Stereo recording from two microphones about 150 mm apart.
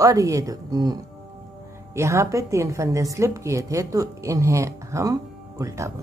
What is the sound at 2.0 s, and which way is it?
A woman's voice, 20° right (ahead or behind).